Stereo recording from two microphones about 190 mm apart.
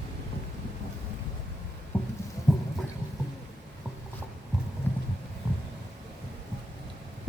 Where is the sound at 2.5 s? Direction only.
Centre (ahead or behind).